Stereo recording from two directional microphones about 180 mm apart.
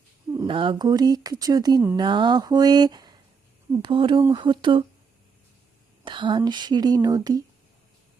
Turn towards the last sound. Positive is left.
turn(degrees=-20)  # may be behind; listen again after turning